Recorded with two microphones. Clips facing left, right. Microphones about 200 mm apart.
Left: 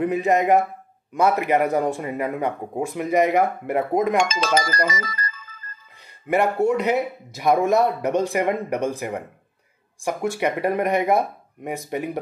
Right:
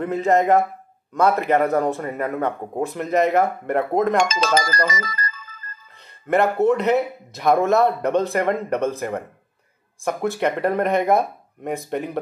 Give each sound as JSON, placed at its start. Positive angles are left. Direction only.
{"t": 0.0, "sound": "speech", "side_deg": 15}
{"t": 4.3, "sound": "speech", "side_deg": -40}
{"t": 5.9, "sound": "a man's voice", "side_deg": 10}